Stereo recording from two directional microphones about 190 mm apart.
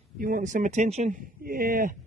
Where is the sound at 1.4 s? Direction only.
50° right (ahead or behind).